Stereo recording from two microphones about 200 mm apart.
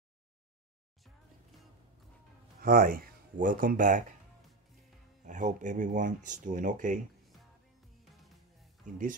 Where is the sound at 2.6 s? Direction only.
45° right (ahead or behind).